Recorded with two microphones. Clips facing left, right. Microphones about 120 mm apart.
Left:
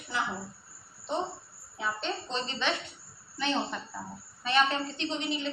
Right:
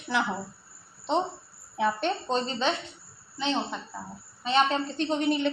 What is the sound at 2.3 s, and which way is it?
Speech, 40° right (ahead or behind).